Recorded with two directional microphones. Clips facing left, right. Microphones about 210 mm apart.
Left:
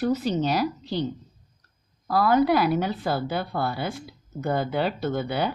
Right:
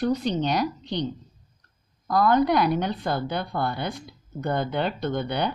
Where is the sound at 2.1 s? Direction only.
5° left (ahead or behind).